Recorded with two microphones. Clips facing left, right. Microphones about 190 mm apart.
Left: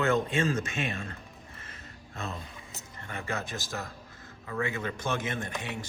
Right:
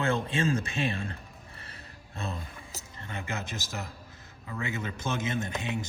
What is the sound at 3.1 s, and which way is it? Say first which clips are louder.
Speech: left 2 dB; 20° right (ahead or behind).